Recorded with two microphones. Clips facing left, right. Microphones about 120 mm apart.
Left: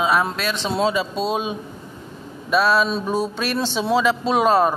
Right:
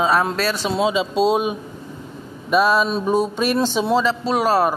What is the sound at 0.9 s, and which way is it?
Speech, 20° right (ahead or behind).